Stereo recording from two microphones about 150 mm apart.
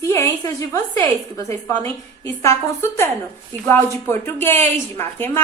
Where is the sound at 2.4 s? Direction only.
15° left (ahead or behind).